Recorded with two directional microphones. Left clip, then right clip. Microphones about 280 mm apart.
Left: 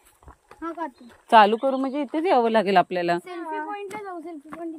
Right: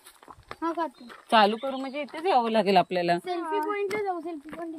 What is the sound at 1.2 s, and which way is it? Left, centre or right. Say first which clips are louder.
Speech: left 6 dB; centre.